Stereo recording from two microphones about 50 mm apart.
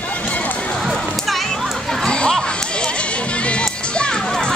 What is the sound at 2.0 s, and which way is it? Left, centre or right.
Crowd, centre.